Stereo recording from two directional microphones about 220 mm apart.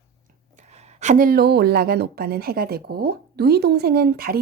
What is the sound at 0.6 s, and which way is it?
A woman's voice, 30° right (ahead or behind).